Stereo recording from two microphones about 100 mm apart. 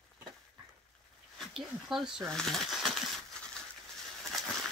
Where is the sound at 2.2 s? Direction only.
5° left (ahead or behind).